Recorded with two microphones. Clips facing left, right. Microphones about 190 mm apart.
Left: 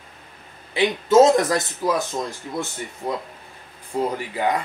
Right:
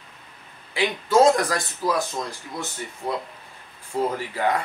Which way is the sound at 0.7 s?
20° left (ahead or behind).